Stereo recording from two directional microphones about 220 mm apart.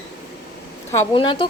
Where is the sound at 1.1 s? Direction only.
25° left (ahead or behind).